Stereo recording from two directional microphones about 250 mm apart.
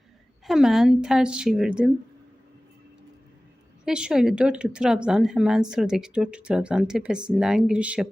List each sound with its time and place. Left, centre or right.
0.4 s speech: centre
3.8 s speech: centre